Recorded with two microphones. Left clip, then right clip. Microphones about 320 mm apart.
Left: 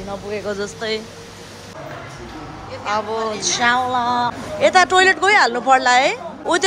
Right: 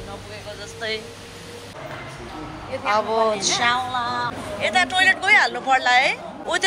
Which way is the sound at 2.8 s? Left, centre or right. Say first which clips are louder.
Right 2 dB; centre.